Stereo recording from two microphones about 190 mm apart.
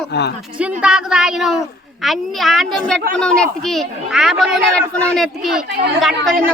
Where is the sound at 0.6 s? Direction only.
5° right (ahead or behind).